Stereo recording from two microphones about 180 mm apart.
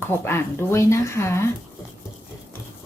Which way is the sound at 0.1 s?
15° left (ahead or behind).